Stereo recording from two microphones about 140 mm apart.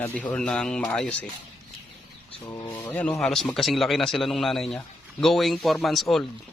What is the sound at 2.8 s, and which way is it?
A man's voice, 10° left (ahead or behind).